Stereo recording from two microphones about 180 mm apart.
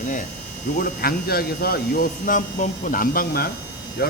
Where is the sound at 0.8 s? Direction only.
55° left (ahead or behind).